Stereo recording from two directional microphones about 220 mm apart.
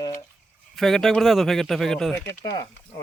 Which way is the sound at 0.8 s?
Centre (ahead or behind).